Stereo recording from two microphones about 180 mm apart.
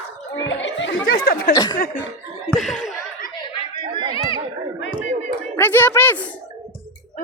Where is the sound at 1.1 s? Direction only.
55° left (ahead or behind).